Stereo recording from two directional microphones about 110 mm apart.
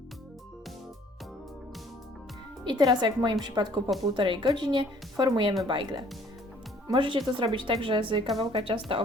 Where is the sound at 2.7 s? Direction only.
40° right (ahead or behind).